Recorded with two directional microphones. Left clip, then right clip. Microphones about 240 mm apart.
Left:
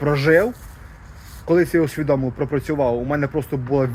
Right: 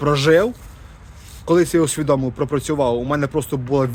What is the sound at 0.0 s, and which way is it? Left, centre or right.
Speech, right.